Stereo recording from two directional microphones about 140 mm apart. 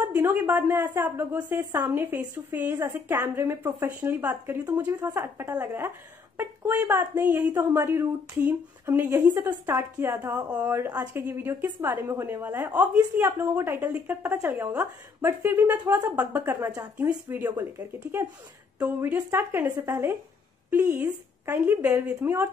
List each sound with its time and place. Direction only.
0.0 s a woman's voice: 15° right (ahead or behind)